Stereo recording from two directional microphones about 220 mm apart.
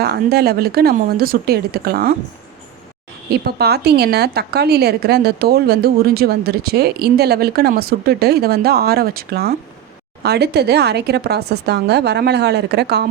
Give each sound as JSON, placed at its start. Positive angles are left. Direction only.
{"t": 0.0, "sound": "a woman's voice", "side_deg": -45}
{"t": 3.2, "sound": "a woman's voice", "side_deg": -45}